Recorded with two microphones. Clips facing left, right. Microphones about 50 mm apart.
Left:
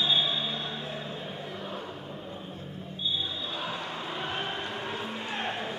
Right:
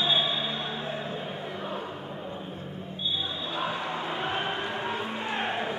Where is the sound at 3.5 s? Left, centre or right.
Centre.